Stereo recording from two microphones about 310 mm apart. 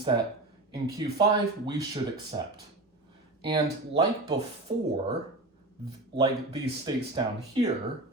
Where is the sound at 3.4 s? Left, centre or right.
Centre.